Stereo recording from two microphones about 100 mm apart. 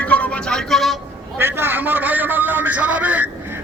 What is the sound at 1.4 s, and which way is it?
A man's voice, 25° right (ahead or behind).